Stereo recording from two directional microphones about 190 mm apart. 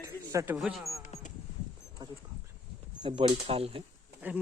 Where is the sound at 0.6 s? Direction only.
Centre (ahead or behind).